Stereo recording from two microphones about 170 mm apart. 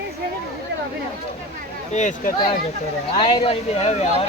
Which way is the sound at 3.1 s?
35° left (ahead or behind).